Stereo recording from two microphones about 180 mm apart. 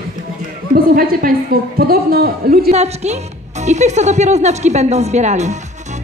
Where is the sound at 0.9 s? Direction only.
55° right (ahead or behind).